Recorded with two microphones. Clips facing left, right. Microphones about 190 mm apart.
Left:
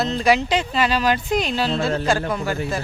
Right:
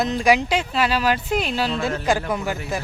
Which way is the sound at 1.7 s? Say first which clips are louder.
Left 3 dB; 30° left (ahead or behind).